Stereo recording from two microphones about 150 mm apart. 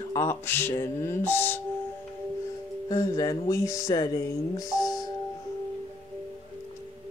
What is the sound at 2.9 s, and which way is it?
Speech, 25° left (ahead or behind).